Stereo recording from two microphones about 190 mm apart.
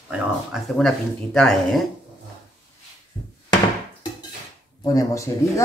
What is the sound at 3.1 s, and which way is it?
Cupboard open or close, 20° left (ahead or behind).